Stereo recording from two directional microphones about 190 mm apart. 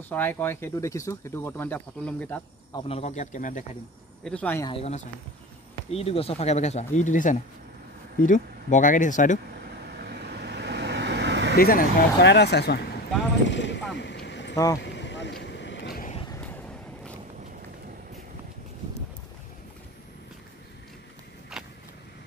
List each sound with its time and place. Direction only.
0.1 s speech: 10° left (ahead or behind)
2.7 s speech: 30° left (ahead or behind)
4.2 s speech: 5° left (ahead or behind)
4.6 s speech: 30° left (ahead or behind)
9.9 s vehicle: 60° right (ahead or behind)
11.5 s speech: 50° left (ahead or behind)
13.5 s a sound: 70° left (ahead or behind)
14.5 s speech: 20° left (ahead or behind)
14.8 s vehicle: 70° left (ahead or behind)
21.5 s vehicle: centre (ahead or behind)